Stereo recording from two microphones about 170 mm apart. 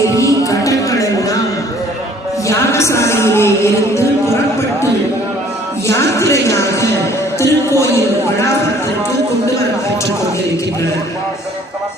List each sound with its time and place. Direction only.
0.2 s music: 20° left (ahead or behind)
2.5 s speech: 15° left (ahead or behind)
5.9 s speech: 15° left (ahead or behind)
7.3 s a sound: 15° left (ahead or behind)